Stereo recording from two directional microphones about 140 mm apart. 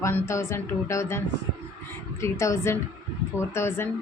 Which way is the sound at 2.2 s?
20° left (ahead or behind).